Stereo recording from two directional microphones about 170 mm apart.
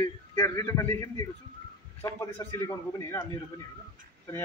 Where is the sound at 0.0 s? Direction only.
15° left (ahead or behind).